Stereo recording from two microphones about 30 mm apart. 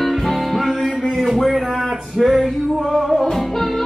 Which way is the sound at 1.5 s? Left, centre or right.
Centre.